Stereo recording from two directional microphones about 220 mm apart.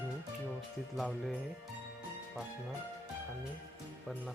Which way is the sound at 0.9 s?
Centre (ahead or behind).